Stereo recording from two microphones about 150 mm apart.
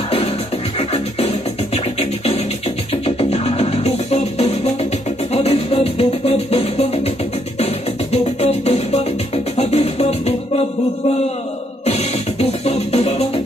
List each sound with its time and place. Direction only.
0.7 s music: 45° left (ahead or behind)
11.8 s music: 45° left (ahead or behind)